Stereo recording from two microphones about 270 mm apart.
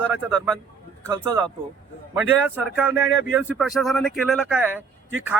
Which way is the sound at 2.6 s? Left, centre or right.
Centre.